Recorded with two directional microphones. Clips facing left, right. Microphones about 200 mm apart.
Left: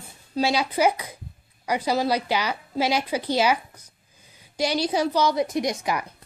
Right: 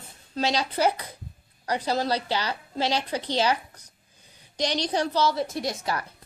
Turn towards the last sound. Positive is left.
turn(degrees=15)  # may be behind; listen again after turning